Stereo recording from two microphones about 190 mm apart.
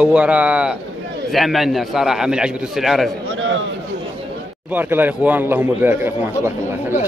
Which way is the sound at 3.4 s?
90° right.